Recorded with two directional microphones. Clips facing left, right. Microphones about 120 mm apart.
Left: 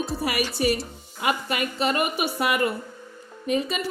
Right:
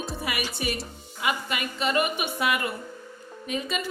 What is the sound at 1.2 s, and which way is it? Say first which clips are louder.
Speech: left 3 dB; 40° left (ahead or behind).